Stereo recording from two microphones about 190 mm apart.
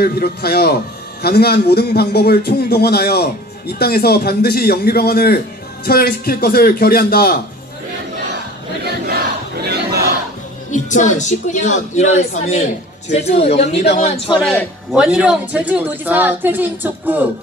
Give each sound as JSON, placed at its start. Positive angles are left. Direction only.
{"t": 0.0, "sound": "a man's voice", "side_deg": 55}
{"t": 8.8, "sound": "battle cry", "side_deg": -55}
{"t": 10.7, "sound": "a woman's voice", "side_deg": 40}
{"t": 14.5, "sound": "speech", "side_deg": 10}
{"t": 15.0, "sound": "a woman's voice", "side_deg": -5}